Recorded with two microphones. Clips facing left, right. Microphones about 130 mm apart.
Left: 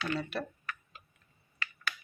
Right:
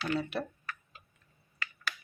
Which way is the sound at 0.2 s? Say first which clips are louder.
Right 2 dB; 20° right (ahead or behind).